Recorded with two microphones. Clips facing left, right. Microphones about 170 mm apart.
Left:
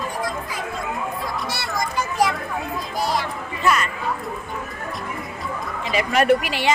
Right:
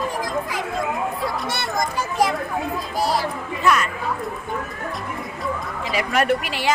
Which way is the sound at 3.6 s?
Centre (ahead or behind).